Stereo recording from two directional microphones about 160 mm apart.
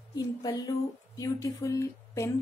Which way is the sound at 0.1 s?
25° left (ahead or behind).